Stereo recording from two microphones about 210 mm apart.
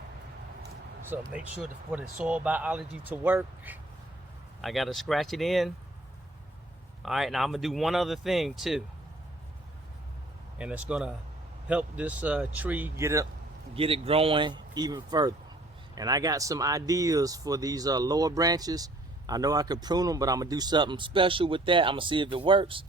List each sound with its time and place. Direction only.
1.1 s speech: 5° right (ahead or behind)
7.0 s speech: centre (ahead or behind)
10.6 s speech: 5° right (ahead or behind)
13.7 s speech: 25° right (ahead or behind)